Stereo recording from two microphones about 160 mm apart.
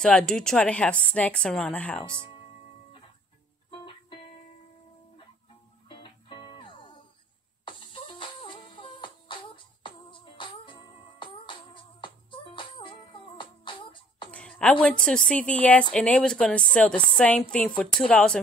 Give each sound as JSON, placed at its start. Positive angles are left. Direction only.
{"t": 0.0, "sound": "a woman's voice", "side_deg": 5}
{"t": 3.7, "sound": "music", "side_deg": 35}
{"t": 5.9, "sound": "music", "side_deg": 30}
{"t": 14.3, "sound": "a woman's voice", "side_deg": 5}